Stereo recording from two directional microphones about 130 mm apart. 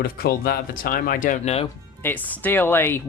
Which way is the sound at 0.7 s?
90° left.